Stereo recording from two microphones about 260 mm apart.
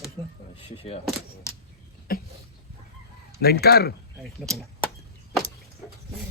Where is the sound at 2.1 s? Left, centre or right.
Left.